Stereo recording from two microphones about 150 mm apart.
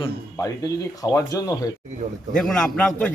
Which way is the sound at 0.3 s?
20° left (ahead or behind).